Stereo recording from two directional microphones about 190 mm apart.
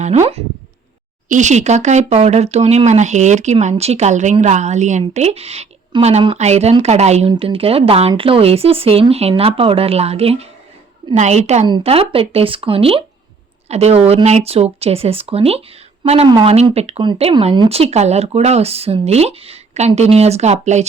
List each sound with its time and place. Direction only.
0.0 s speech: 35° right (ahead or behind)